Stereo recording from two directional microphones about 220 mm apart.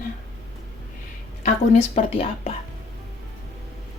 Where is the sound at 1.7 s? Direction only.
30° left (ahead or behind).